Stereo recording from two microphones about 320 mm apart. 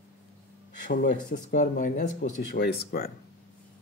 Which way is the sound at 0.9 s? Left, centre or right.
Left.